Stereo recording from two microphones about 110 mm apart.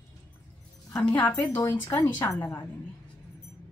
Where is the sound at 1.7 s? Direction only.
15° left (ahead or behind).